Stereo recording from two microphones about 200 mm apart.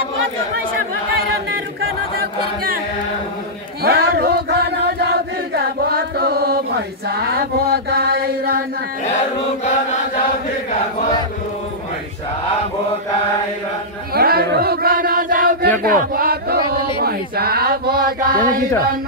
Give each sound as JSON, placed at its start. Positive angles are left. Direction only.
{"t": 3.8, "sound": "chant", "side_deg": -50}
{"t": 7.1, "sound": "mantra", "side_deg": -50}
{"t": 14.1, "sound": "chant", "side_deg": -50}